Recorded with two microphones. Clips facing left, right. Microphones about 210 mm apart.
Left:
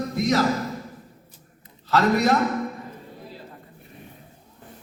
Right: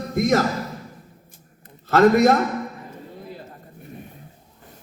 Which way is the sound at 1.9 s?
50° right (ahead or behind).